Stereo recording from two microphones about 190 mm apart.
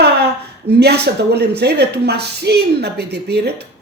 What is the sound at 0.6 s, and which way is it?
Speech, 60° right (ahead or behind).